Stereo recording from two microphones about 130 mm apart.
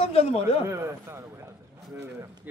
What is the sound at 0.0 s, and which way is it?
Speech, 50° left (ahead or behind).